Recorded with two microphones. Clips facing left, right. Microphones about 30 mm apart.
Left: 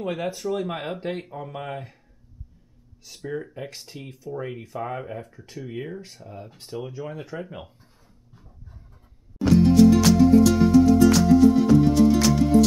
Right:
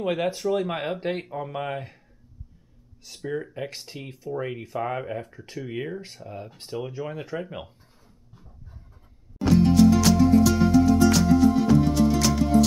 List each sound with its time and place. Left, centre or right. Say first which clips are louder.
0.0 s speech: right 3 dB; centre
3.0 s speech: right 1 dB; centre
9.4 s music: left 2 dB; centre